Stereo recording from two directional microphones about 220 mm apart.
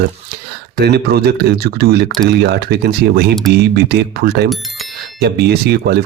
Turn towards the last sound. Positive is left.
turn(degrees=-45)  # may be behind; listen again after turning